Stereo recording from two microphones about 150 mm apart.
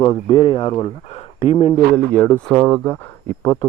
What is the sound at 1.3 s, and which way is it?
Speech, 50° left (ahead or behind).